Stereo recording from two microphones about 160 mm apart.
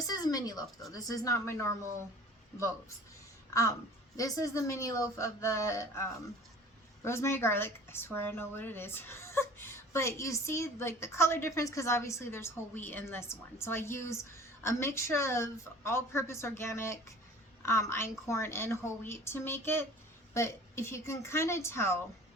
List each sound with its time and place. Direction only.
0.1 s a sound: 25° left (ahead or behind)
0.9 s a woman's voice: 20° left (ahead or behind)
4.2 s a woman's voice: 20° left (ahead or behind)